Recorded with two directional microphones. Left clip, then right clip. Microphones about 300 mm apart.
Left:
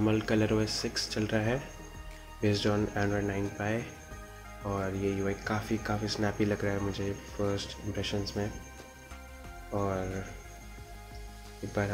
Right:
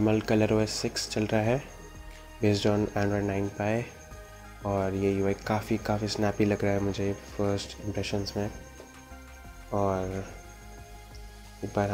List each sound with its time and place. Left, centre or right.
0.0 s speech: centre
9.8 s speech: centre